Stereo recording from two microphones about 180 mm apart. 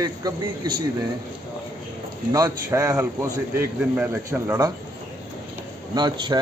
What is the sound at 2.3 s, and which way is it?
A man's voice, 15° right (ahead or behind).